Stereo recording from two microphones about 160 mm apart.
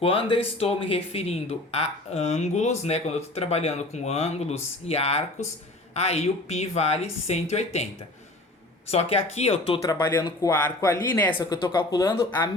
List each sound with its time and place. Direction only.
0.0 s speech: 35° left (ahead or behind)
8.9 s speech: 40° left (ahead or behind)
9.8 s speech: 15° left (ahead or behind)
11.3 s speech: 30° left (ahead or behind)